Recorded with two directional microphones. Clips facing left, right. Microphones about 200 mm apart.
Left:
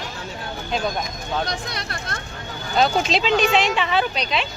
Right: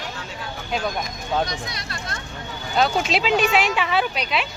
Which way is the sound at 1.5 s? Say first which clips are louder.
Left 2 dB; 60° left (ahead or behind).